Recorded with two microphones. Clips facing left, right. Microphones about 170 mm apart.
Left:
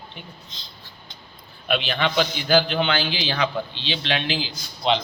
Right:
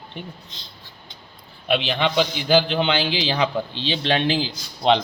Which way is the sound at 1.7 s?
25° right (ahead or behind).